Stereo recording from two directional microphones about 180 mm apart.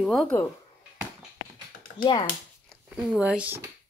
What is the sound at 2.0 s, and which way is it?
Speech, 25° left (ahead or behind).